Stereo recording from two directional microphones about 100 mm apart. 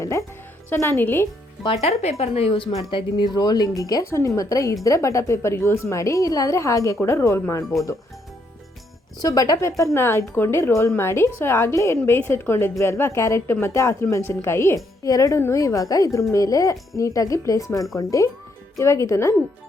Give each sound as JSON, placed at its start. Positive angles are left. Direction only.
{"t": 0.0, "sound": "a woman's voice", "side_deg": 30}
{"t": 1.6, "sound": "speech", "side_deg": 85}
{"t": 2.9, "sound": "a woman's voice", "side_deg": 50}
{"t": 9.2, "sound": "a woman's voice", "side_deg": 40}